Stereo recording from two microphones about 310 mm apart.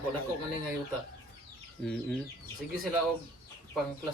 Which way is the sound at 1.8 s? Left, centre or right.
Centre.